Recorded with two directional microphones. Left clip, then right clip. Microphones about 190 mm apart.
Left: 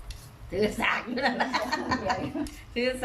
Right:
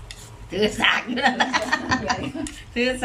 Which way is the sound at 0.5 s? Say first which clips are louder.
Right 7 dB; centre (ahead or behind).